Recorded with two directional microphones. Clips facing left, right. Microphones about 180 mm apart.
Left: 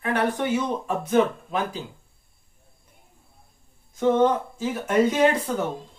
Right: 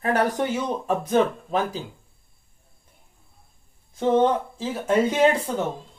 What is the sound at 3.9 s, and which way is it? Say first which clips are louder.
Speech: even; 30° right (ahead or behind).